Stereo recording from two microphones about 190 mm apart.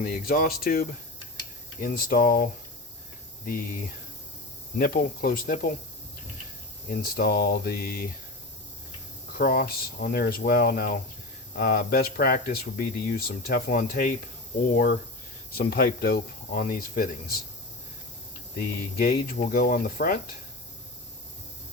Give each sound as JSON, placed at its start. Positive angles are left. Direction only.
{"t": 0.0, "sound": "speech", "side_deg": 50}
{"t": 4.8, "sound": "speech", "side_deg": 50}
{"t": 6.9, "sound": "speech", "side_deg": 55}
{"t": 9.3, "sound": "speech", "side_deg": 55}
{"t": 15.5, "sound": "speech", "side_deg": 50}
{"t": 18.6, "sound": "speech", "side_deg": 55}